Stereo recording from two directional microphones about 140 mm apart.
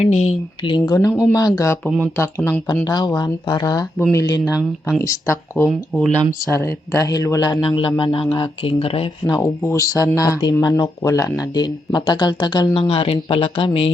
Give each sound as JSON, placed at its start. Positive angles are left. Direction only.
{"t": 0.0, "sound": "speech", "side_deg": 55}
{"t": 0.6, "sound": "speech", "side_deg": 35}
{"t": 4.4, "sound": "speech", "side_deg": -5}
{"t": 5.0, "sound": "speech", "side_deg": 20}
{"t": 9.3, "sound": "speech", "side_deg": 20}